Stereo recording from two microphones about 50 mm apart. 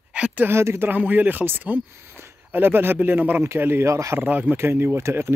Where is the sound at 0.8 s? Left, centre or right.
Right.